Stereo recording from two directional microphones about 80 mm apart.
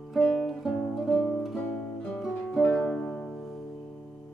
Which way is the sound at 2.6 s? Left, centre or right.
Centre.